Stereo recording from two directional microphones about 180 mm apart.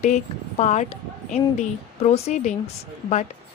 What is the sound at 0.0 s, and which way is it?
Speech, 40° left (ahead or behind).